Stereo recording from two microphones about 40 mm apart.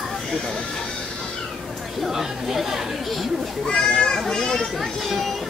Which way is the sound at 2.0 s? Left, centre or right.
Centre.